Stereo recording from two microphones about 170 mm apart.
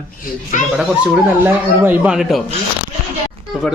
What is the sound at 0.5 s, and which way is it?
Speech, 50° left (ahead or behind).